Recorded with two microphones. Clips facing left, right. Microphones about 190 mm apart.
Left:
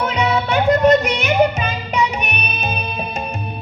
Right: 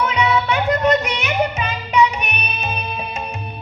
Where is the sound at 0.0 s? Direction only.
45° left (ahead or behind).